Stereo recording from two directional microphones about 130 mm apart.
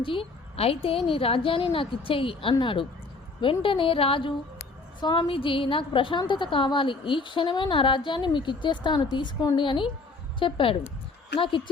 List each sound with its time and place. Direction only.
0.0 s a woman's voice: 45° left (ahead or behind)